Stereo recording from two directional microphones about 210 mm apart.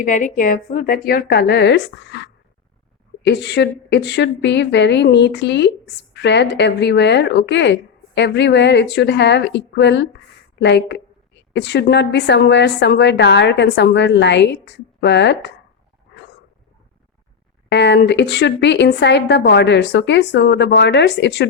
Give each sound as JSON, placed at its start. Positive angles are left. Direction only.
{"t": 0.0, "sound": "a woman's voice", "side_deg": 35}
{"t": 17.7, "sound": "a woman's voice", "side_deg": 55}